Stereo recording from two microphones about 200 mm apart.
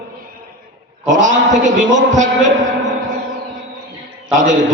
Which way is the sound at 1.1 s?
40° right (ahead or behind).